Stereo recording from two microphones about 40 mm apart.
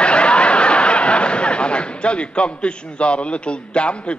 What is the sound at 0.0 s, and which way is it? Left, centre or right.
A man's voice, left.